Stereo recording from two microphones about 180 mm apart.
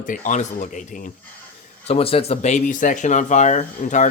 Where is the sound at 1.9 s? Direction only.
30° left (ahead or behind).